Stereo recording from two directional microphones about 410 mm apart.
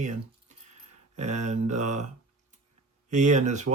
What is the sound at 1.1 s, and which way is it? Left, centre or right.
Speech, centre.